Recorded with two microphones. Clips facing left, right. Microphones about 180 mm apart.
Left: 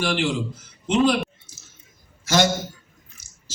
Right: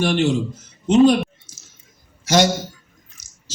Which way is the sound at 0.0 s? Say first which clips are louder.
Right 5 dB; 45° right (ahead or behind).